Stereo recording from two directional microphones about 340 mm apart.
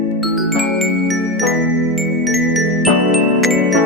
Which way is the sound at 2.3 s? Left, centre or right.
Centre.